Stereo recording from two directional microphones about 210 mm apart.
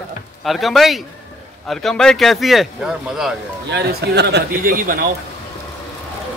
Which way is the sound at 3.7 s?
50° right (ahead or behind).